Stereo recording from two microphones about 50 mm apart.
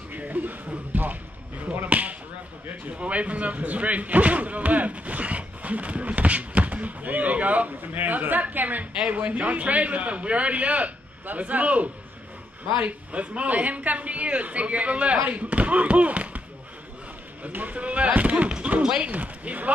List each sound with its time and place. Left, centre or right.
0.1 s music: right
1.7 s a sound: right
3.0 s speech: right
17.5 s speech: right
19.0 s speech: right